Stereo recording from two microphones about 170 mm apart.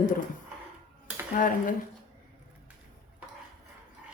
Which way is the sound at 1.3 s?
50° left (ahead or behind).